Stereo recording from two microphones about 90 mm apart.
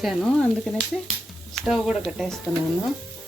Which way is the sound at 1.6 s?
5° right (ahead or behind).